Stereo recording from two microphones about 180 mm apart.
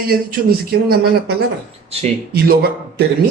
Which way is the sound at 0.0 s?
55° right (ahead or behind).